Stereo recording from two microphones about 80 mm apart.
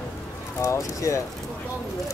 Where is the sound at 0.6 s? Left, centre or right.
Left.